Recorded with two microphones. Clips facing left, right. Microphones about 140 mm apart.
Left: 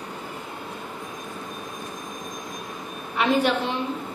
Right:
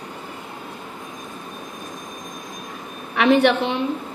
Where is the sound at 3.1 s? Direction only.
70° right (ahead or behind).